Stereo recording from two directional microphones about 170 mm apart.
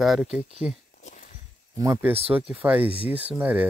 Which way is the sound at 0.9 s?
50° left (ahead or behind).